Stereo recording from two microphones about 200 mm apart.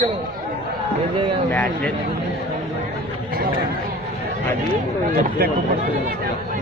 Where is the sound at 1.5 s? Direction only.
10° left (ahead or behind).